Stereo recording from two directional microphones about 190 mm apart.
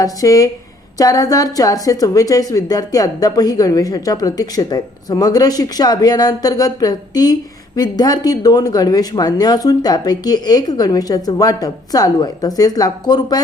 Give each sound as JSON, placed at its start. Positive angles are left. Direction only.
{"t": 0.0, "sound": "a woman's voice", "side_deg": 20}